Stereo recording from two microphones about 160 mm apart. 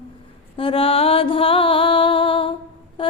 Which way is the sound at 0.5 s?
35° left (ahead or behind).